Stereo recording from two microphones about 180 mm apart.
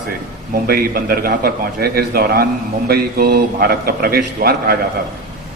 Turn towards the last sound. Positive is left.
turn(degrees=-55)  # may be behind; listen again after turning